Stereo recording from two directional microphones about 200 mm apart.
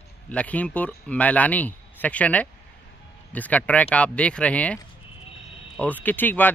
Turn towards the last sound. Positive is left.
turn(degrees=10)  # may be behind; listen again after turning